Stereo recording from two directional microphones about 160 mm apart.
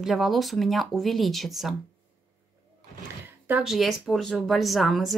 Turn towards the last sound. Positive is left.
turn(degrees=0)  # may be behind; listen again after turning